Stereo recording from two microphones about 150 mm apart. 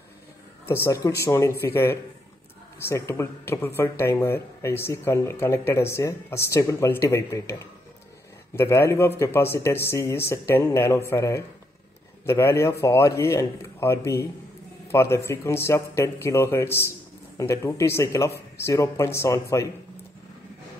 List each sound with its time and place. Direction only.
0.7 s speech: 15° left (ahead or behind)